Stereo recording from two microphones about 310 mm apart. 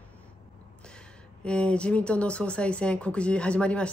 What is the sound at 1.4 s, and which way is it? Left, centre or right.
Speech, centre.